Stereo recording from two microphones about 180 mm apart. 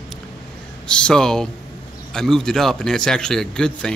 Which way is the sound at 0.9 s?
5° left (ahead or behind).